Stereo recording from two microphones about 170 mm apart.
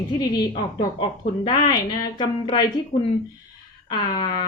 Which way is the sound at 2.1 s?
30° left (ahead or behind).